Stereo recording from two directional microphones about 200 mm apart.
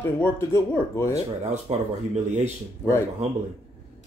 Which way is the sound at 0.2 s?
10° left (ahead or behind).